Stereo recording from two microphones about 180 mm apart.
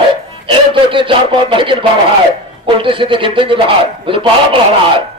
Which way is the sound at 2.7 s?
30° right (ahead or behind).